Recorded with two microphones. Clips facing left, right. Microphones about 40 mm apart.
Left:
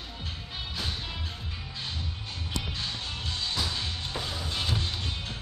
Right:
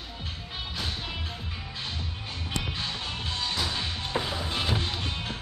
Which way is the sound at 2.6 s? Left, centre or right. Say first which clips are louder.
Right 2 dB; centre.